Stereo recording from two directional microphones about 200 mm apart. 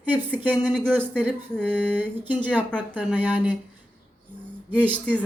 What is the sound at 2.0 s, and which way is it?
Speech, 10° right (ahead or behind).